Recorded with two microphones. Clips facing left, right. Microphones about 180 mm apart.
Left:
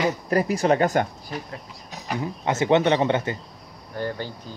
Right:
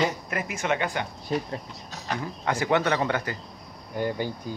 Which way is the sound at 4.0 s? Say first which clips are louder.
Right 1 dB; 15° right (ahead or behind).